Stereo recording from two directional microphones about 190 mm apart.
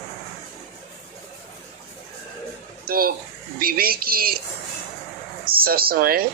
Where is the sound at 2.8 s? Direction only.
50° right (ahead or behind).